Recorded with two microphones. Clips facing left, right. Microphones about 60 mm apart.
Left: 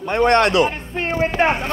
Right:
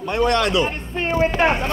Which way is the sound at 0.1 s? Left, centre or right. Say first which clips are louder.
Left 3 dB; left.